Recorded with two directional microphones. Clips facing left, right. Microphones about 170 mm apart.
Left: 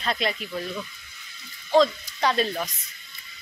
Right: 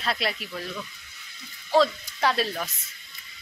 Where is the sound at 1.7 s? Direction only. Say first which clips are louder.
Left 2 dB; 5° right (ahead or behind).